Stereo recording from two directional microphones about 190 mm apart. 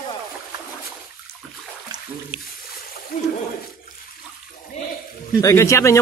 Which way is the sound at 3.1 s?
50° left (ahead or behind).